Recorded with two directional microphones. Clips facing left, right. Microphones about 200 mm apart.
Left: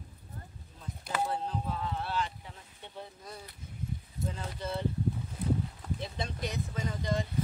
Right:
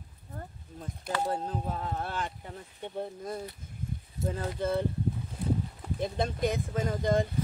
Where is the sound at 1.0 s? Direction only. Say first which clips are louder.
Right 2 dB; 45° right (ahead or behind).